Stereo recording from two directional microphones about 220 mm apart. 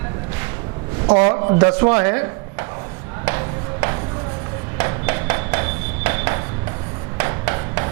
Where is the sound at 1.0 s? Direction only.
25° right (ahead or behind).